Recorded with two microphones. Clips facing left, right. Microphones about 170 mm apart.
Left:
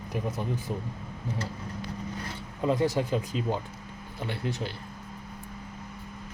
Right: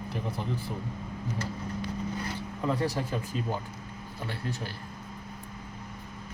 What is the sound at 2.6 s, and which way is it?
Speech, 20° left (ahead or behind).